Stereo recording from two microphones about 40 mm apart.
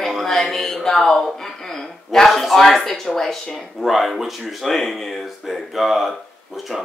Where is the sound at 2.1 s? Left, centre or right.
Centre.